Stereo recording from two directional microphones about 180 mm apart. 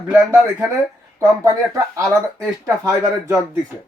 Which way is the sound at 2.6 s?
15° right (ahead or behind).